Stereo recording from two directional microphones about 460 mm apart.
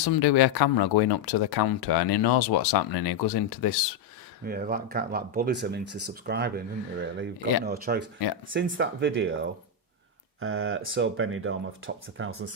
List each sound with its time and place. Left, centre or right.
0.0 s speech: left
4.4 s speech: centre